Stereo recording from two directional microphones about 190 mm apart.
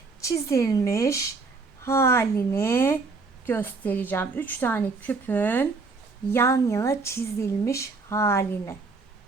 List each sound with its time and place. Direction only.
0.2 s speech: 15° left (ahead or behind)